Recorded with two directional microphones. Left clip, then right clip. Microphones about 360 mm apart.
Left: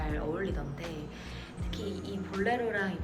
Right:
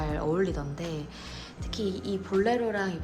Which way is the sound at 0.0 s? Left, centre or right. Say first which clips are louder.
Right 6 dB; centre.